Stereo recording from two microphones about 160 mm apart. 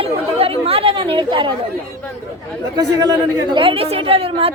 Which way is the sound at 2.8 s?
25° right (ahead or behind).